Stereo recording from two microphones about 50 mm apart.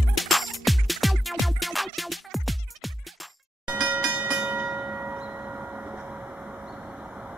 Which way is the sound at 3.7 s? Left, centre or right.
Right.